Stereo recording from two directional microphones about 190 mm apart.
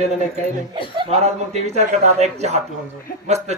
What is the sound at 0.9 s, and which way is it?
A man's voice, 35° right (ahead or behind).